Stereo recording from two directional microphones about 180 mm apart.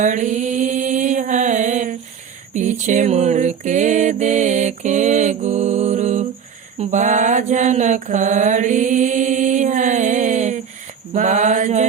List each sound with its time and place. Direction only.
0.0 s mantra: 45° right (ahead or behind)
2.6 s music: 40° right (ahead or behind)
6.7 s mantra: 45° right (ahead or behind)